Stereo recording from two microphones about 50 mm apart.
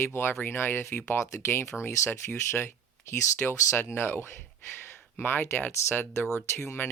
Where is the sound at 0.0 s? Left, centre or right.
Left.